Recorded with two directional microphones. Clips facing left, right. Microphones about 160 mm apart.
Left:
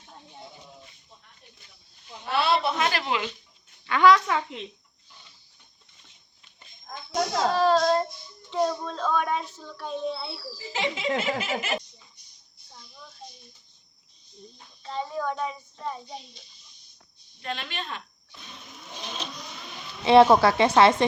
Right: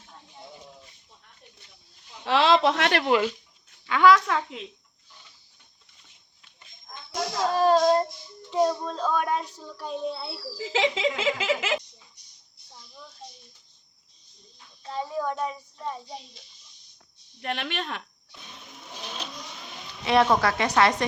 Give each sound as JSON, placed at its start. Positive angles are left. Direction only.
{"t": 2.2, "sound": "speech", "side_deg": -90}
{"t": 3.8, "sound": "a child's voice", "side_deg": -5}
{"t": 7.8, "sound": "child singing", "side_deg": -15}
{"t": 8.4, "sound": "a child's voice", "side_deg": -5}
{"t": 10.6, "sound": "a sound", "side_deg": -90}
{"t": 14.8, "sound": "a child's voice", "side_deg": -5}
{"t": 17.4, "sound": "speech", "side_deg": -65}
{"t": 19.0, "sound": "vehicle", "side_deg": -10}
{"t": 20.1, "sound": "a woman's voice", "side_deg": 30}